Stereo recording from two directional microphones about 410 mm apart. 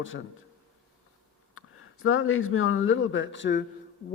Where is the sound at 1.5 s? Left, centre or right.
Left.